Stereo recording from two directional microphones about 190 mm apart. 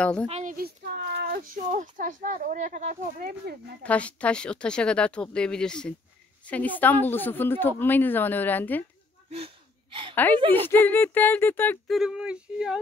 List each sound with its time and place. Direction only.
0.0 s speech: 5° left (ahead or behind)
0.3 s a child's voice: 40° right (ahead or behind); by 1.4 s 60° right (ahead or behind)
1.7 s speech: 40° right (ahead or behind)
3.8 s a woman's voice: 5° left (ahead or behind)
9.3 s gasp: 30° right (ahead or behind)
10.1 s a woman's voice: 10° left (ahead or behind)
10.4 s a woman's voice: 30° right (ahead or behind)
10.7 s a woman's voice: 10° left (ahead or behind)
12.0 s speech: 5° right (ahead or behind)